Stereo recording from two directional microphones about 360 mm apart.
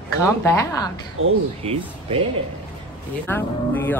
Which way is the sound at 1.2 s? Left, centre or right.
Right.